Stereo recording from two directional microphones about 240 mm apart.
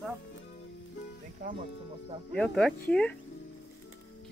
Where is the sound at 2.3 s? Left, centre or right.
Centre.